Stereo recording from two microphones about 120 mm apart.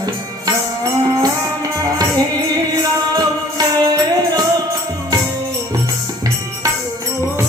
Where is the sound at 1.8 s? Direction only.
30° right (ahead or behind).